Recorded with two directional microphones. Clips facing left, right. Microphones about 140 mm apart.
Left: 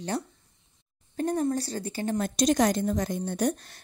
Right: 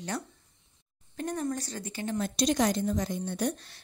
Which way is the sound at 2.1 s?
45° left (ahead or behind).